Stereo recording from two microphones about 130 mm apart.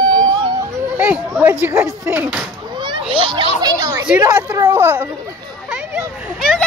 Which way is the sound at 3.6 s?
30° right (ahead or behind).